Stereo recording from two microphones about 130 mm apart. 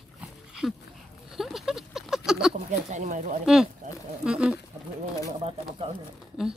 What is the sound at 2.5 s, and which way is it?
Speech, 70° right (ahead or behind).